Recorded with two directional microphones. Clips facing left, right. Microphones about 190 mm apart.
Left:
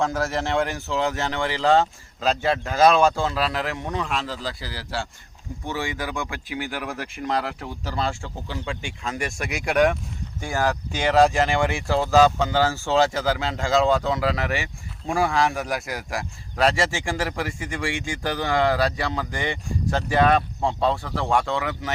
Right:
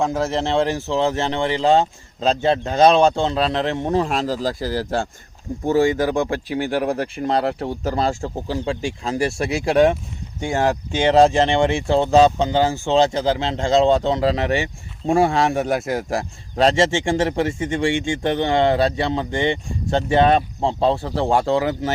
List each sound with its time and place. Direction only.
0.0 s speech: 20° right (ahead or behind)